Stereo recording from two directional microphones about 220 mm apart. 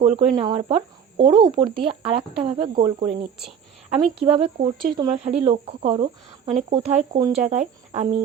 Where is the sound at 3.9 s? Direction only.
25° right (ahead or behind).